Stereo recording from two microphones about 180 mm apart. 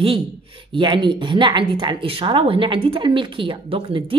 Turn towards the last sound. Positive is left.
turn(degrees=-30)  # may be behind; listen again after turning